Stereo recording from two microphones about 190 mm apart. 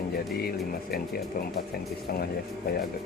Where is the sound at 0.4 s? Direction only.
55° left (ahead or behind).